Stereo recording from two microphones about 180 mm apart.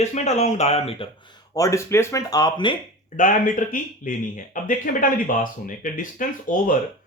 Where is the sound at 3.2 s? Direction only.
45° left (ahead or behind).